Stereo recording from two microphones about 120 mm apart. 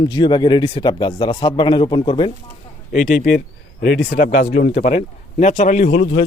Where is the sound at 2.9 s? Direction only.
90° left.